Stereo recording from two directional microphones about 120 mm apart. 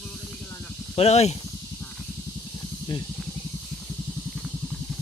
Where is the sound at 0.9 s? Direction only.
60° left (ahead or behind).